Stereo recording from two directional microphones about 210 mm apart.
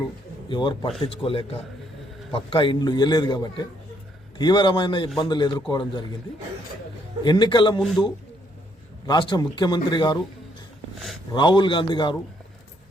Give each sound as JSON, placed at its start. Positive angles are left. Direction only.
{"t": 0.4, "sound": "a man's voice", "side_deg": 20}
{"t": 7.3, "sound": "a man's voice", "side_deg": 20}
{"t": 7.8, "sound": "a man's voice", "side_deg": 0}
{"t": 9.0, "sound": "a man's voice", "side_deg": 20}
{"t": 11.3, "sound": "a man's voice", "side_deg": 20}